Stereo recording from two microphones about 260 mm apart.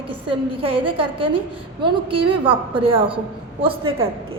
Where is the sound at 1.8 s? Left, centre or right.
Centre.